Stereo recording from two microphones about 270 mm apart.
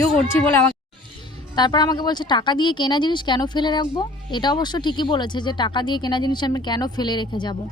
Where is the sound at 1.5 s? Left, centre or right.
Centre.